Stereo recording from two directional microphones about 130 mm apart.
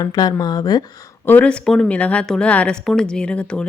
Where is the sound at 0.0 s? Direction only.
30° left (ahead or behind).